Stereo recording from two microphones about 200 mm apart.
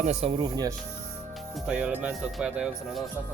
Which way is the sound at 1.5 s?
5° right (ahead or behind).